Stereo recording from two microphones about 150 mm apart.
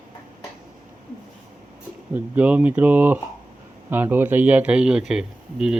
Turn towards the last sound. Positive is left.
turn(degrees=-5)  # may be behind; listen again after turning